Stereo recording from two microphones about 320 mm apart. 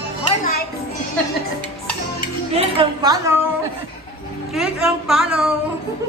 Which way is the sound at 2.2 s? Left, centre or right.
Centre.